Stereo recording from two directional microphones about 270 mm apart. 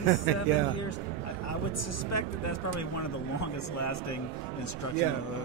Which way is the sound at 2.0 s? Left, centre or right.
Left.